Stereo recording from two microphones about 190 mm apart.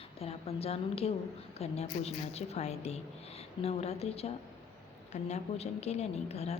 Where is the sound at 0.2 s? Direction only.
30° left (ahead or behind).